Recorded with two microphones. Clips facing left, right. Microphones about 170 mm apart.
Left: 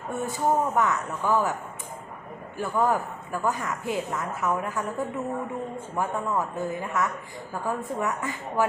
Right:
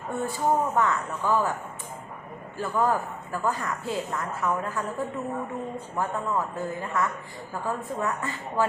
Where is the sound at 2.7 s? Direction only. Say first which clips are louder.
Left 1 dB; 10° left (ahead or behind).